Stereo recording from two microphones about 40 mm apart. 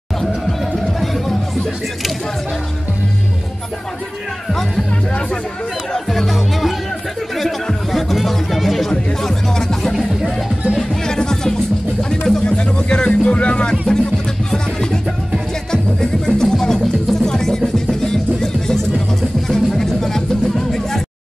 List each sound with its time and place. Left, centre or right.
0.2 s music: centre
4.5 s speech: centre
5.9 s speech: centre
7.9 s speech: centre
9.2 s music: centre
14.5 s music: centre